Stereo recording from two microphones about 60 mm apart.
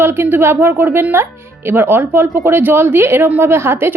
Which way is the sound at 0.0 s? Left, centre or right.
Right.